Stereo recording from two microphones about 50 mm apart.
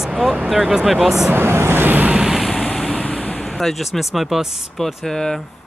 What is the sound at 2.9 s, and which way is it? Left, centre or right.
Vehicle, left.